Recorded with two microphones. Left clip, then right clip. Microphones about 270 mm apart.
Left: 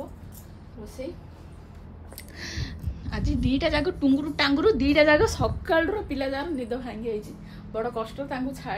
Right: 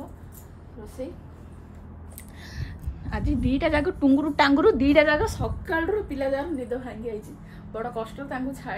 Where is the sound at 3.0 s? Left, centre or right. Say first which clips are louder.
Right 2 dB; centre.